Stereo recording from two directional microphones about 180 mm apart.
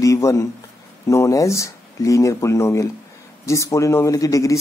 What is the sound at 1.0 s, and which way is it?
A man's voice, 15° left (ahead or behind).